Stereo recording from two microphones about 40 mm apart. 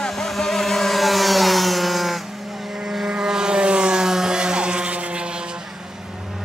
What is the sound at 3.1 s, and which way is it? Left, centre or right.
Vehicle, centre.